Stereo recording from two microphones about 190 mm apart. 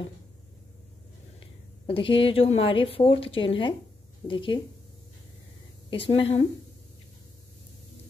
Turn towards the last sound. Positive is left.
turn(degrees=30)  # may be behind; listen again after turning